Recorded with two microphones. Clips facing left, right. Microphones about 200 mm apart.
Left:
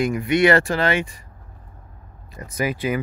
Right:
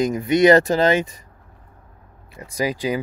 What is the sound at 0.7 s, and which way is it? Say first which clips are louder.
Speech: right 4 dB; 40° right (ahead or behind).